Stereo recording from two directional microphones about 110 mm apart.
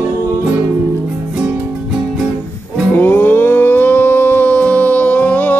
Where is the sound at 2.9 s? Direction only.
20° left (ahead or behind).